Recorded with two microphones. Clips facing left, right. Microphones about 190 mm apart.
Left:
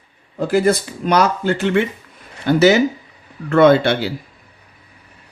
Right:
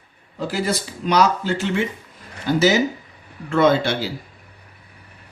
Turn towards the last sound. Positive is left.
turn(degrees=60)  # may be behind; listen again after turning